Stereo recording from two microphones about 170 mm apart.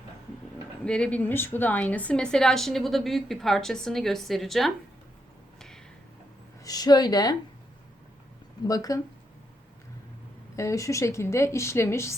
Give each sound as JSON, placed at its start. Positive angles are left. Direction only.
{"t": 0.9, "sound": "a woman's voice", "side_deg": 5}
{"t": 5.5, "sound": "a sound", "side_deg": 5}
{"t": 6.7, "sound": "a woman's voice", "side_deg": 25}
{"t": 8.6, "sound": "a woman's voice", "side_deg": 20}
{"t": 10.5, "sound": "a woman's voice", "side_deg": 20}